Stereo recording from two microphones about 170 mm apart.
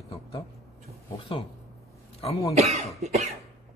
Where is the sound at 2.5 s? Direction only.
40° right (ahead or behind).